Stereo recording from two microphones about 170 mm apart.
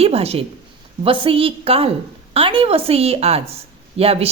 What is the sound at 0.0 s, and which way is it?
A woman's voice, 35° right (ahead or behind).